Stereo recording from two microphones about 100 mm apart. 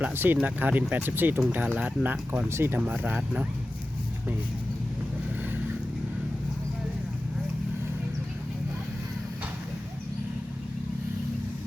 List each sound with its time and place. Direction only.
0.0 s speech: 20° right (ahead or behind)
2.5 s speech: 25° right (ahead or behind)